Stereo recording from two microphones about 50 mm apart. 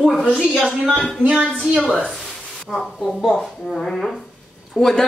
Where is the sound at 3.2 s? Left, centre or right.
Centre.